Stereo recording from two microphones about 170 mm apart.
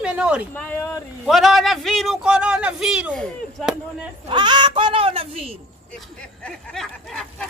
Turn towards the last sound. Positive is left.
turn(degrees=5)  # may be behind; listen again after turning